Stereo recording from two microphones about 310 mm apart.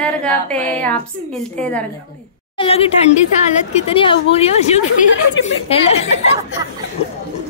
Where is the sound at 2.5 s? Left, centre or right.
Centre.